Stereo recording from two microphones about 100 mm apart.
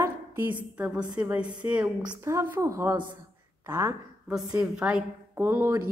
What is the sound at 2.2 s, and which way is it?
A woman's voice, 30° right (ahead or behind).